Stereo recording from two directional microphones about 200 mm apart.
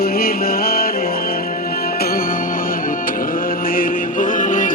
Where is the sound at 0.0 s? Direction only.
50° left (ahead or behind).